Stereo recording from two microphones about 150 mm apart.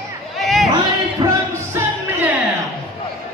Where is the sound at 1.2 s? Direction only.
35° right (ahead or behind).